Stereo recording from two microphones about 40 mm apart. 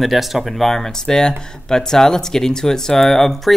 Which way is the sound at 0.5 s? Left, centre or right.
Centre.